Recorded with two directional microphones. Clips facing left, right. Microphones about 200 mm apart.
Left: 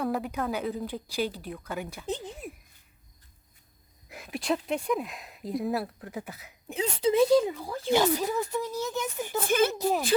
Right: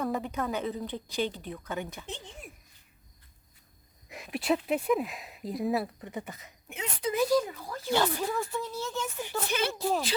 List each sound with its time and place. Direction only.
0.0 s speech: 5° left (ahead or behind)
4.1 s speech: centre (ahead or behind)
6.7 s speech: 30° left (ahead or behind); by 9.2 s 15° left (ahead or behind)
9.5 s speech: 50° left (ahead or behind)
9.7 s speech: 15° left (ahead or behind)